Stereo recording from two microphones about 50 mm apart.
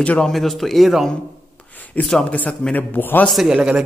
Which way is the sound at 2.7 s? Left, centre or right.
Left.